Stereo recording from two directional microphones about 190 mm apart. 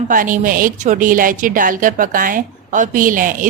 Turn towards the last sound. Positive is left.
turn(degrees=-45)  # may be behind; listen again after turning